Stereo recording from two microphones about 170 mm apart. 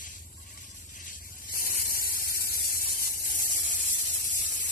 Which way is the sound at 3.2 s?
55° left (ahead or behind).